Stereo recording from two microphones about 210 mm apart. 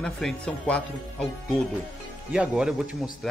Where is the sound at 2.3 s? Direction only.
5° right (ahead or behind).